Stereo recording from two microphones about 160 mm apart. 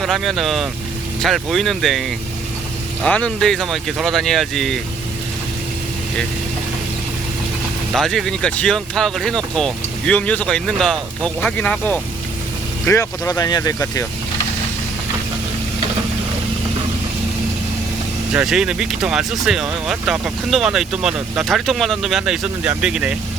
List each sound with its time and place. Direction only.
0.0 s speech: centre (ahead or behind)
7.9 s speech: centre (ahead or behind); by 14.1 s 20° left (ahead or behind)
18.3 s speech: 5° right (ahead or behind)